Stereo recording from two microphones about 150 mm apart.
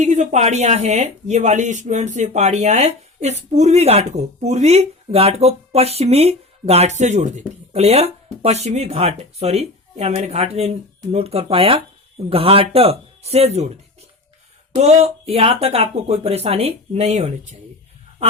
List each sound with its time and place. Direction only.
0.0 s speech: 55° right (ahead or behind)
14.8 s speech: 45° right (ahead or behind)